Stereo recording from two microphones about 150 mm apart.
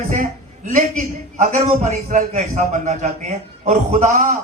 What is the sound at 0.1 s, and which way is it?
A man's voice, 60° right (ahead or behind).